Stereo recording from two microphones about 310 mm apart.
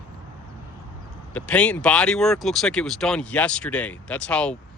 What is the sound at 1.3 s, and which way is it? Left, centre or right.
Speech, centre.